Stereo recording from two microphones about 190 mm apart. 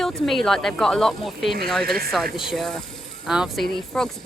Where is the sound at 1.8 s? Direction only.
50° right (ahead or behind).